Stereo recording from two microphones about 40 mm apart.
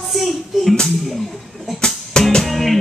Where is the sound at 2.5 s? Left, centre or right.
Centre.